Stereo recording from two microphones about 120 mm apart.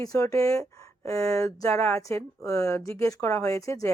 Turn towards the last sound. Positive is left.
turn(degrees=25)  # may be behind; listen again after turning